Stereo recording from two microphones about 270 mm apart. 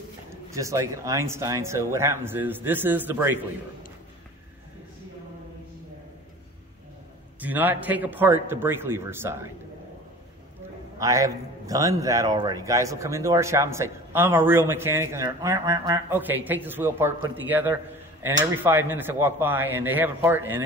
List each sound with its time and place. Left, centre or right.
0.3 s a man's voice: centre
7.3 s a man's voice: centre
11.0 s a man's voice: centre